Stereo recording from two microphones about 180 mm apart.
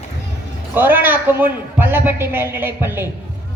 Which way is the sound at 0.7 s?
10° right (ahead or behind).